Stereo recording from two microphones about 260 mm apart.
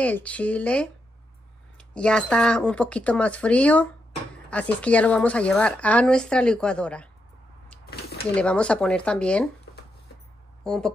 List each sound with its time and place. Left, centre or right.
0.0 s speech: centre
7.8 s a sound: left
8.4 s speech: centre
10.6 s speech: centre